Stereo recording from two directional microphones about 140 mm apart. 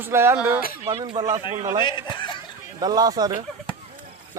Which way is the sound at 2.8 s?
30° right (ahead or behind).